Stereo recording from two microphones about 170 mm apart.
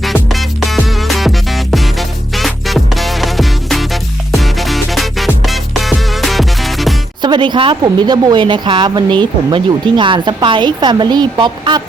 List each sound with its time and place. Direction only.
0.0 s music: centre (ahead or behind)
7.2 s a woman's voice: 25° right (ahead or behind)